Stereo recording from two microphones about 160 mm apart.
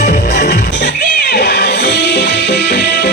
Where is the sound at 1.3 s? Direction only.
90° left.